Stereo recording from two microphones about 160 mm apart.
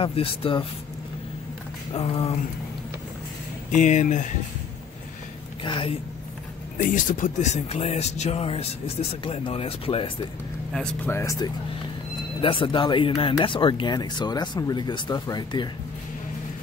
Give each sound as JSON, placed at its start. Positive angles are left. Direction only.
{"t": 0.0, "sound": "speech", "side_deg": 35}
{"t": 2.0, "sound": "speech", "side_deg": 35}
{"t": 3.7, "sound": "speech", "side_deg": 50}
{"t": 5.6, "sound": "speech", "side_deg": 30}
{"t": 6.8, "sound": "speech", "side_deg": 55}
{"t": 10.7, "sound": "speech", "side_deg": 5}
{"t": 11.1, "sound": "speech", "side_deg": 20}
{"t": 12.4, "sound": "speech", "side_deg": 30}